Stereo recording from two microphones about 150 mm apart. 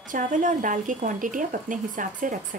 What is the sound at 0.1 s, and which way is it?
Speech, 60° right (ahead or behind).